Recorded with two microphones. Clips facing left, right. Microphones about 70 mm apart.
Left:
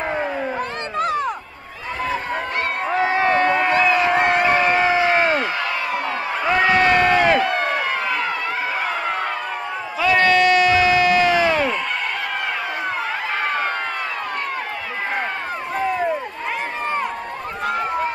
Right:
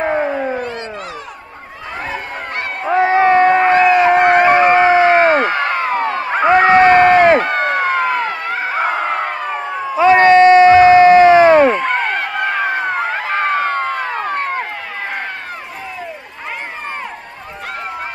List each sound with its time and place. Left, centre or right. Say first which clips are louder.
0.0 s cat: right 6 dB; right
0.9 s music: left 7 dB; left
2.9 s a sound: right 8 dB; right